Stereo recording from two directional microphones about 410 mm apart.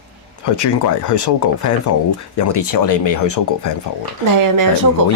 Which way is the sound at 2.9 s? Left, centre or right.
Left.